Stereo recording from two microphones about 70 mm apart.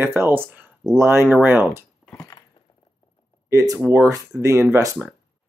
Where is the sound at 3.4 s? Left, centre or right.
Right.